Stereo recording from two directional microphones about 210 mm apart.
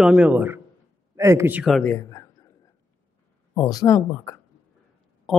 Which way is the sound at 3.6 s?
15° left (ahead or behind).